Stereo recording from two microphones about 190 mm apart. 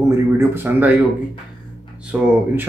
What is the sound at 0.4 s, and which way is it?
Speech, 10° right (ahead or behind).